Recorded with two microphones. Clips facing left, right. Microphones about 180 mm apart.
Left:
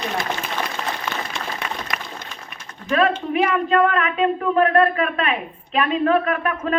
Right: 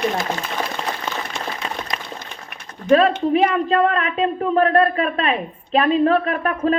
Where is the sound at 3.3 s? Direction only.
35° right (ahead or behind).